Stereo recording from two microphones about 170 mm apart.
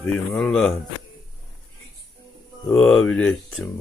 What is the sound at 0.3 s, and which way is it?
Speech, 5° left (ahead or behind).